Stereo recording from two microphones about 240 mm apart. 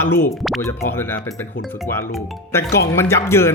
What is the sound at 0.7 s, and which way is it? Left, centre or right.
Speech, centre.